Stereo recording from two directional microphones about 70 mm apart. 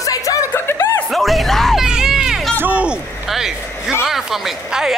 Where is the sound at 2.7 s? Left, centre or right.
Centre.